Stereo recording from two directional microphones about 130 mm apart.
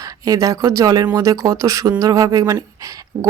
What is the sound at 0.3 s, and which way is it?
Speech, 25° right (ahead or behind).